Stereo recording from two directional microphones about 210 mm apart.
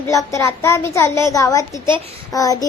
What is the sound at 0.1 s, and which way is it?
A child's voice, 15° left (ahead or behind).